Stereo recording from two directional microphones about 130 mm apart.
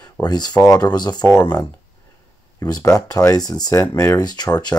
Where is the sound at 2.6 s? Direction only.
30° left (ahead or behind).